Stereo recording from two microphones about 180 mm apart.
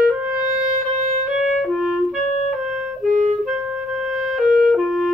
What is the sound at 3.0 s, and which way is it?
Clarinet, 45° right (ahead or behind).